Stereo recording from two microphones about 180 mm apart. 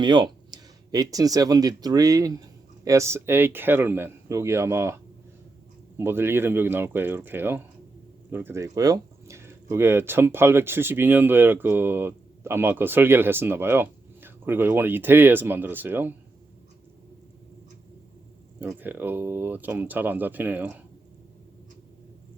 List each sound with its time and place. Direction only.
0.0 s speech: 25° right (ahead or behind)
6.0 s speech: 10° right (ahead or behind)
18.6 s speech: 10° right (ahead or behind)